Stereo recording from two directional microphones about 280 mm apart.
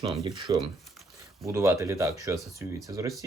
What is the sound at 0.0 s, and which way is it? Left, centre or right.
Speech, centre.